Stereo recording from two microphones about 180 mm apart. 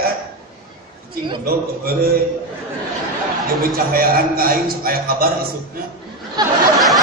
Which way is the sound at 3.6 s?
55° right (ahead or behind).